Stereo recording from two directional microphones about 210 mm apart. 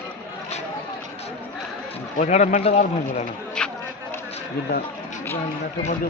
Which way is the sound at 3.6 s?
5° left (ahead or behind).